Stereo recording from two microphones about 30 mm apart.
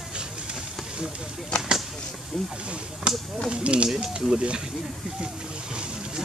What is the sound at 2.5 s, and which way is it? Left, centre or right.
Speech, right.